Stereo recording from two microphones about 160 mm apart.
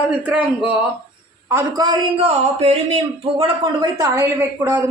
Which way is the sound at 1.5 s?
20° right (ahead or behind).